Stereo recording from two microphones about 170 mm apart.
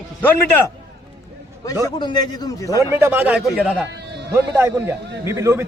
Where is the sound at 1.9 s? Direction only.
25° left (ahead or behind).